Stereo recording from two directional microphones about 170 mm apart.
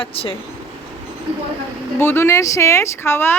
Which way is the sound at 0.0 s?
30° left (ahead or behind).